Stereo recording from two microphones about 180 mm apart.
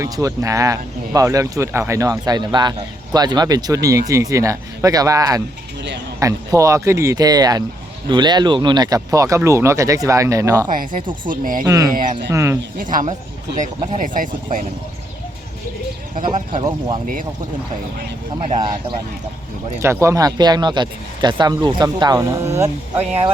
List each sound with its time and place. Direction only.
0.0 s speech: 20° right (ahead or behind)
10.7 s speech: 50° right (ahead or behind)
11.6 s speech: 20° right (ahead or behind)
12.8 s speech: 45° right (ahead or behind)
13.7 s speech: 30° right (ahead or behind)
14.0 s speech: 45° right (ahead or behind)
16.5 s speech: 25° right (ahead or behind)
18.3 s speech: 35° right (ahead or behind)
19.8 s speech: 15° right (ahead or behind)